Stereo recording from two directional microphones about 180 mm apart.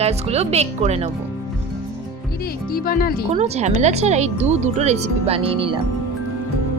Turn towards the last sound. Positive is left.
turn(degrees=-30)  # may be behind; listen again after turning